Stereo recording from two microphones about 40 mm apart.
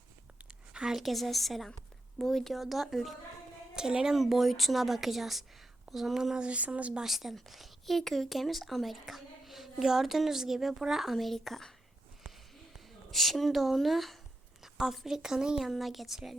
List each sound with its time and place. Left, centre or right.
0.9 s speech: centre
3.8 s a woman's voice: centre
4.2 s speech: centre
6.1 s a woman's voice: centre
6.4 s speech: right
7.0 s a woman's voice: centre
12.7 s a woman's voice: centre
15.6 s speech: centre